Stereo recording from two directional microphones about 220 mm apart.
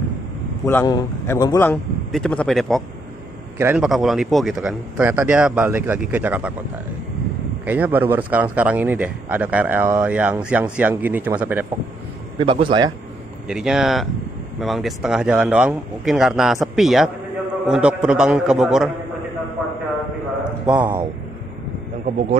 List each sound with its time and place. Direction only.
0.7 s a man's voice: 15° left (ahead or behind); by 6.5 s 5° right (ahead or behind)
7.6 s a man's voice: 5° right (ahead or behind)
12.4 s a man's voice: 25° right (ahead or behind)
13.5 s a man's voice: 5° right (ahead or behind)
20.6 s a man's voice: 5° right (ahead or behind)
22.0 s a man's voice: 30° right (ahead or behind)